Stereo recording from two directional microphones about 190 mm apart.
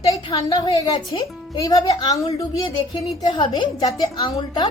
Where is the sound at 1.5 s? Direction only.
20° left (ahead or behind).